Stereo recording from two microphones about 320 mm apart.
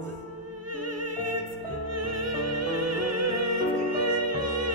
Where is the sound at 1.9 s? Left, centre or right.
Right.